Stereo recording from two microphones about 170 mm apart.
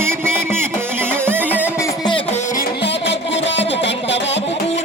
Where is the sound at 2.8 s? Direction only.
90° left.